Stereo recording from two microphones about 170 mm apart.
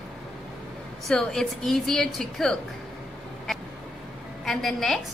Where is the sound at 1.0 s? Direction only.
5° left (ahead or behind).